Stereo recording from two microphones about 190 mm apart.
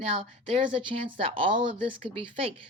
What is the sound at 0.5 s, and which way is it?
Speech, 25° right (ahead or behind).